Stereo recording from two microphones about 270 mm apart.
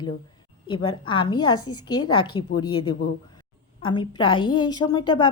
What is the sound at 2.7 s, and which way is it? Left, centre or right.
Speech, left.